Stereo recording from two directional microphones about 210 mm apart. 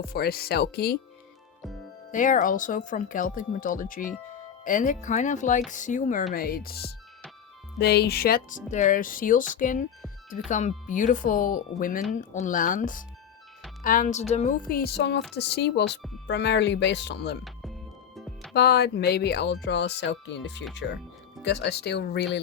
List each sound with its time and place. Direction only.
0.1 s speech: 45° left (ahead or behind)
2.1 s speech: 40° left (ahead or behind)
18.5 s speech: 50° left (ahead or behind)